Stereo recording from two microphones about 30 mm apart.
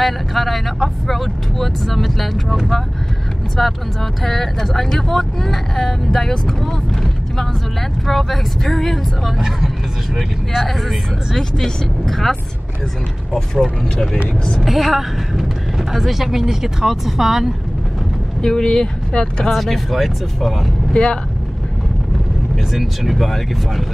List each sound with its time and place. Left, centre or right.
0.0 s speech: centre
3.5 s speech: centre
10.7 s speech: centre
11.3 s speech: centre
14.6 s speech: centre
18.4 s speech: left
19.5 s speech: centre
20.9 s speech: left
22.7 s speech: centre